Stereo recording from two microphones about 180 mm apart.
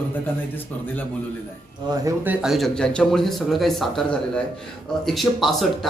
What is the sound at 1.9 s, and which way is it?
Speech, 20° right (ahead or behind).